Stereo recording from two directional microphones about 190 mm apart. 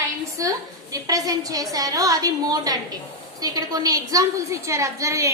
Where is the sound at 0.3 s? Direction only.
20° right (ahead or behind).